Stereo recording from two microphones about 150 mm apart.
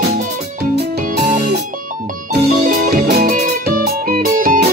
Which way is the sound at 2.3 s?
70° right (ahead or behind).